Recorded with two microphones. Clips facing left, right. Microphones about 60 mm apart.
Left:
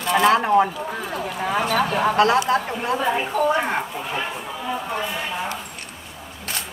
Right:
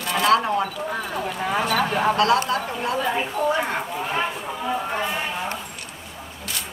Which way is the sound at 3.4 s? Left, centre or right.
Left.